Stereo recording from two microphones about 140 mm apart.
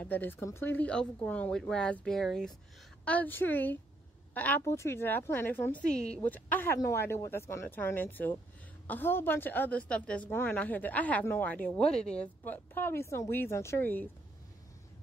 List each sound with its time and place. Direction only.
0.0 s a woman's voice: 15° left (ahead or behind)